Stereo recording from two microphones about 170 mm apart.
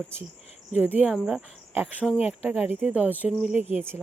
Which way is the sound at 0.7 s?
10° right (ahead or behind).